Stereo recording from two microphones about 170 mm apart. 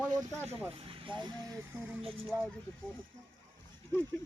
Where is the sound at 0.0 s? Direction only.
15° right (ahead or behind).